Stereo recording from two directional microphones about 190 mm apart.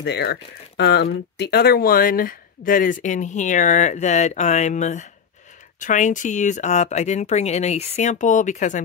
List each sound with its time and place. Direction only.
0.0 s speech: 60° left (ahead or behind); by 8.8 s 40° left (ahead or behind)